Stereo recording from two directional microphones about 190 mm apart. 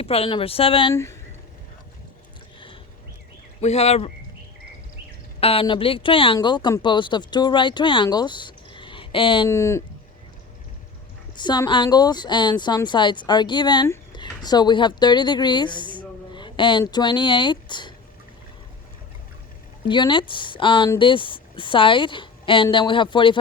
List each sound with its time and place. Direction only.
0.0 s a woman's voice: 30° left (ahead or behind)
3.6 s speech: 35° left (ahead or behind)
5.4 s a woman's voice: 30° left (ahead or behind)
9.5 s speech: 15° left (ahead or behind)
11.3 s a woman's voice: 25° left (ahead or behind)
19.9 s a woman's voice: 25° left (ahead or behind)